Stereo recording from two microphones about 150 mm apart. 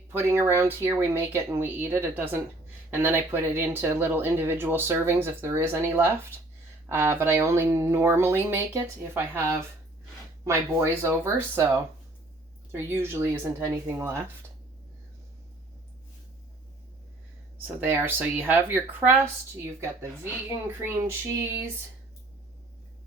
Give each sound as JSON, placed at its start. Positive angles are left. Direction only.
{"t": 0.1, "sound": "speech", "side_deg": -15}
{"t": 17.7, "sound": "speech", "side_deg": -10}